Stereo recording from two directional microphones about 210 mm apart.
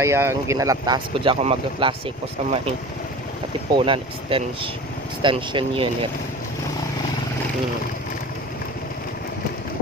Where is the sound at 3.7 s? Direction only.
25° right (ahead or behind).